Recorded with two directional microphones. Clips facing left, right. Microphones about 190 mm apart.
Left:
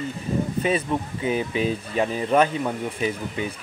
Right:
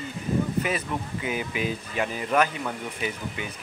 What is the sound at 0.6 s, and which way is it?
Speech, 30° left (ahead or behind).